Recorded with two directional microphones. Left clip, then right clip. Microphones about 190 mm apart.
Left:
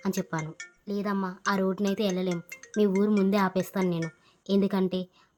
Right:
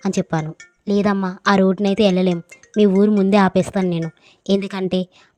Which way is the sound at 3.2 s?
35° right (ahead or behind).